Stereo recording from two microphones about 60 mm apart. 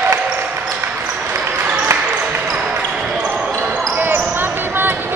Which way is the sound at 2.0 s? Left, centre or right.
Right.